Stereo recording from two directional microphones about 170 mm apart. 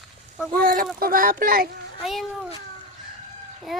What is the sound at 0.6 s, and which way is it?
Speech, 55° right (ahead or behind).